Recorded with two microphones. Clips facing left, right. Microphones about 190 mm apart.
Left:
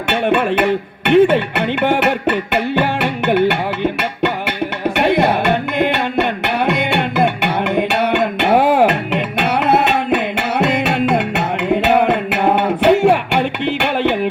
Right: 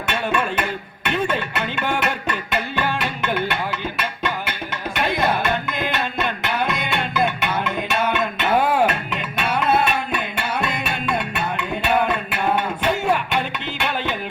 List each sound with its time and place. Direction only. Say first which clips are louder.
0.1 s music: left 8 dB; 60° left (ahead or behind)
4.9 s music: left 7 dB; 65° left (ahead or behind)